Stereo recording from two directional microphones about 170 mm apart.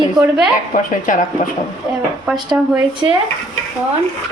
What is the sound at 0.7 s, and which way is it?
Speech, 50° left (ahead or behind).